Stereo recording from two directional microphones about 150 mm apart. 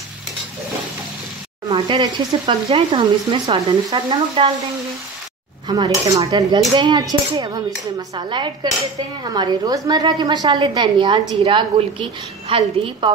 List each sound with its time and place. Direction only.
1.7 s speech: 35° right (ahead or behind)
5.7 s a woman's voice: 25° right (ahead or behind)